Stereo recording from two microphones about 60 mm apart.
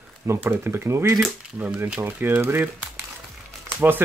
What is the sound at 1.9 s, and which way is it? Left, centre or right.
Speech, right.